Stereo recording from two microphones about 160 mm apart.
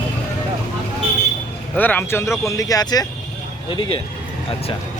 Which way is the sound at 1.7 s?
10° left (ahead or behind).